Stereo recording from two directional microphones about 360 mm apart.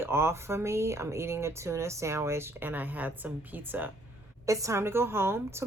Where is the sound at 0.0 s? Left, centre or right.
Centre.